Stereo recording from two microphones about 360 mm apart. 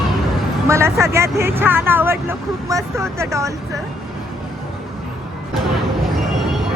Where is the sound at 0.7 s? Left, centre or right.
Centre.